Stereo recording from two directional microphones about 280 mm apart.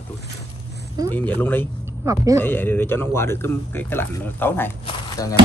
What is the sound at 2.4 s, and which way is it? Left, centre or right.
Speech, centre.